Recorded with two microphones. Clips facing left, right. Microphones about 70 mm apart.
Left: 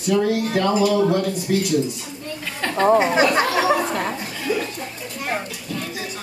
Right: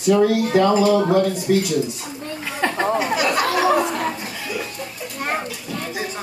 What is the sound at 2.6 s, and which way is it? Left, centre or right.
Chatter, centre.